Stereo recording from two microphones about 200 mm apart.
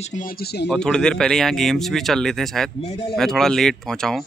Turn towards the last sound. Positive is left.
turn(degrees=5)  # may be behind; listen again after turning